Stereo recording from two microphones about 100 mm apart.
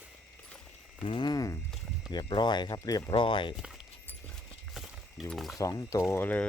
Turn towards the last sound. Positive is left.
turn(degrees=30)  # may be behind; listen again after turning